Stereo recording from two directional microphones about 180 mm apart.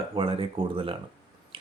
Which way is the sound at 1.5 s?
30° right (ahead or behind).